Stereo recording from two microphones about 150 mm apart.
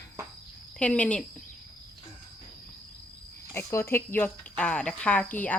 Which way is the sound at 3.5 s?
15° left (ahead or behind).